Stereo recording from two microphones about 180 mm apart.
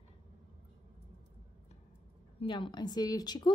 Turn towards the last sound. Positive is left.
turn(degrees=20)  # may be behind; listen again after turning